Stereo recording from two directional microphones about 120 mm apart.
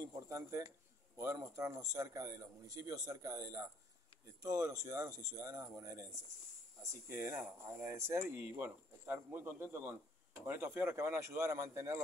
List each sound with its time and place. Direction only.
0.0 s speech: 25° right (ahead or behind)